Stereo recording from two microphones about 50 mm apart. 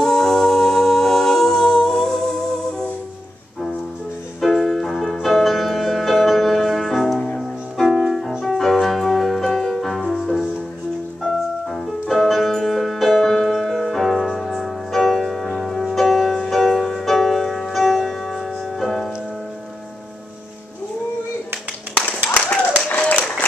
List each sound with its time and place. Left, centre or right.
0.0 s a capella: centre
4.4 s music: centre
11.7 s music: centre
22.8 s applause: left